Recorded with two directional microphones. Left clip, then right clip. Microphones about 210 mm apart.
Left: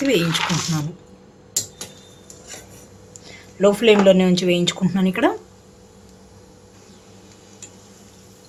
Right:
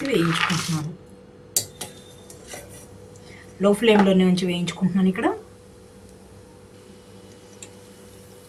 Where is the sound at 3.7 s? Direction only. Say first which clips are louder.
Left 4 dB; 40° left (ahead or behind).